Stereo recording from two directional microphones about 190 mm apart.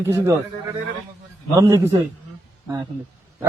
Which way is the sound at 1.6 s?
15° right (ahead or behind).